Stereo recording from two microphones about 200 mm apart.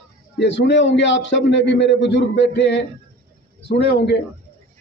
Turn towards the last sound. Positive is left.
turn(degrees=60)  # may be behind; listen again after turning